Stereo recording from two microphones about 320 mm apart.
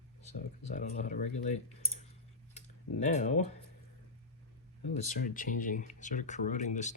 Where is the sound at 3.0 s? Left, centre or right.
Left.